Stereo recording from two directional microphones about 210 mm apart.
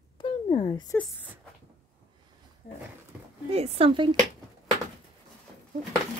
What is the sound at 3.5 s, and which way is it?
Speech, 25° right (ahead or behind).